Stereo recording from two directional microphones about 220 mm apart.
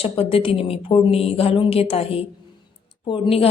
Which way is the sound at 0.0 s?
25° left (ahead or behind).